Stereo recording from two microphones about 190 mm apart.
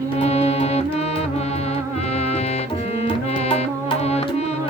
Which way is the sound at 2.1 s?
35° left (ahead or behind).